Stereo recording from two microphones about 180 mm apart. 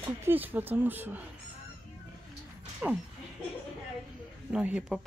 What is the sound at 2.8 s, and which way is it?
Speech, 5° right (ahead or behind).